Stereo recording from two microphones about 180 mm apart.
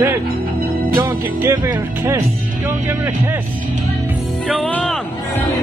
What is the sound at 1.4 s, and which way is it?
Speech, 10° right (ahead or behind).